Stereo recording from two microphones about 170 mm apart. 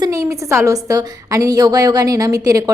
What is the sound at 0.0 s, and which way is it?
A woman's voice, 20° right (ahead or behind).